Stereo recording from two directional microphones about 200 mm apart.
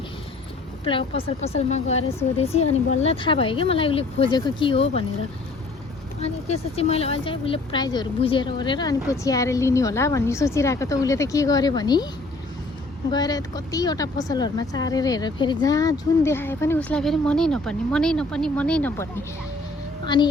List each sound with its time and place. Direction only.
0.9 s speech: 25° left (ahead or behind)
6.2 s speech: 30° left (ahead or behind)
13.1 s speech: 20° left (ahead or behind)
20.1 s speech: 20° left (ahead or behind)